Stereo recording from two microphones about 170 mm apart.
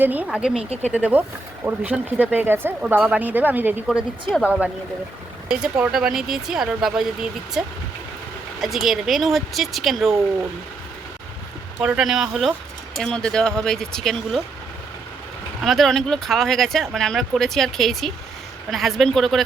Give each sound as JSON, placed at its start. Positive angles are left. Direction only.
{"t": 0.0, "sound": "speech", "side_deg": -10}
{"t": 0.5, "sound": "speech", "side_deg": -35}
{"t": 0.9, "sound": "speech", "side_deg": -10}
{"t": 8.6, "sound": "speech", "side_deg": 0}
{"t": 11.8, "sound": "speech", "side_deg": -5}
{"t": 15.6, "sound": "speech", "side_deg": 0}